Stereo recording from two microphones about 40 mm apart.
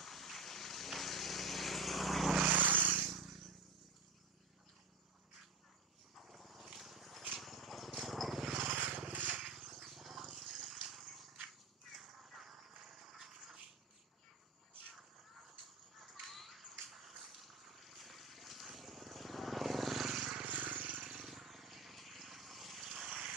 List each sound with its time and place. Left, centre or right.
0.0 s vehicle: centre
2.4 s vehicle: right
3.1 s a sound: centre
6.1 s dog: centre
7.3 s vehicle: centre
8.6 s vehicle: right
9.4 s a sound: centre
16.0 s a sound: centre
16.9 s vehicle: centre
20.4 s vehicle: right
21.0 s vehicle: centre
21.3 s vehicle: centre
23.0 s vehicle: right